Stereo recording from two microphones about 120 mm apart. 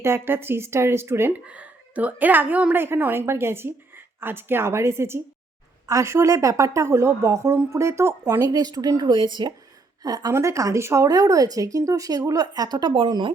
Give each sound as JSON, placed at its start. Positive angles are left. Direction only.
{"t": 0.0, "sound": "speech", "side_deg": -20}